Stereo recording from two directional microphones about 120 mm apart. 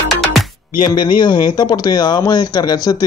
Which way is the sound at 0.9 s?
40° left (ahead or behind).